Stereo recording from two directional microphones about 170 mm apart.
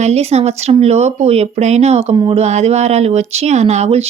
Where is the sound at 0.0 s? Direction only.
40° right (ahead or behind).